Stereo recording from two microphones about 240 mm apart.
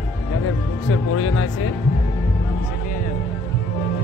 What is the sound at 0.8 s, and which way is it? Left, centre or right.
Speech, left.